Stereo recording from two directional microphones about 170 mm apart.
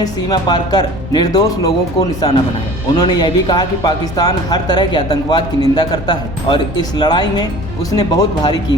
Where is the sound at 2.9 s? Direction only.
25° left (ahead or behind).